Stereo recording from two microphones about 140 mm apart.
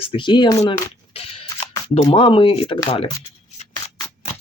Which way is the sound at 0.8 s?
45° left (ahead or behind).